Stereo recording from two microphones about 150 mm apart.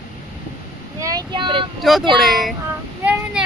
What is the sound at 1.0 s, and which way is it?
Child singing, 25° right (ahead or behind).